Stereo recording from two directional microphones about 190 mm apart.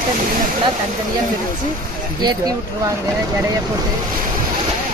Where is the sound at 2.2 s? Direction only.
20° right (ahead or behind).